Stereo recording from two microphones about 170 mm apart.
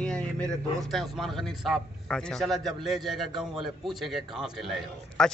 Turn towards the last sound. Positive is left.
turn(degrees=5)  # may be behind; listen again after turning